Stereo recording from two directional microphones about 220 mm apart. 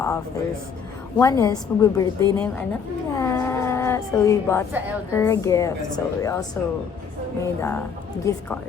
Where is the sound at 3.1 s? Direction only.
15° left (ahead or behind).